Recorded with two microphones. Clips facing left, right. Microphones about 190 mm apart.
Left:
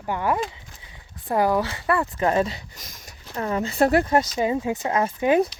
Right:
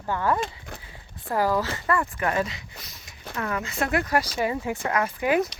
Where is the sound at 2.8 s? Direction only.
45° left (ahead or behind).